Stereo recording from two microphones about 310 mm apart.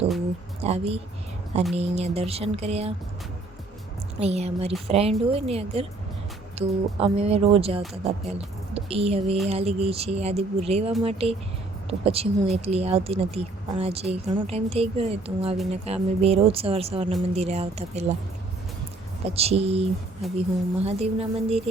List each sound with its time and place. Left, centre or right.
0.6 s speech: centre
4.2 s speech: right
19.2 s speech: centre